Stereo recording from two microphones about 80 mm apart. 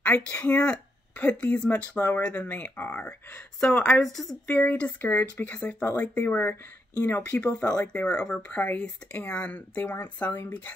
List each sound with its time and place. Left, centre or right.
0.0 s speech: centre
2.0 s speech: left; by 3.9 s centre
4.0 s speech: centre
4.5 s speech: centre